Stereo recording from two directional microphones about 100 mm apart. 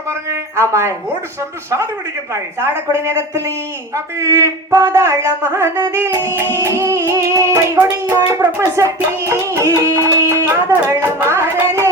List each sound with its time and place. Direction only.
0.1 s a sound: 25° right (ahead or behind)
1.4 s speech: 30° right (ahead or behind)
2.3 s music: 30° right (ahead or behind)
3.9 s speech: 30° right (ahead or behind)
8.1 s music: 30° right (ahead or behind)
10.7 s speech: 20° right (ahead or behind)